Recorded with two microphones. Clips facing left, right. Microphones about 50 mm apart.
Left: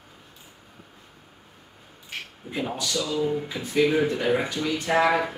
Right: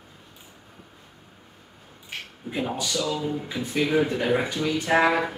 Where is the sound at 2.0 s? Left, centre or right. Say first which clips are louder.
Right 1 dB; centre.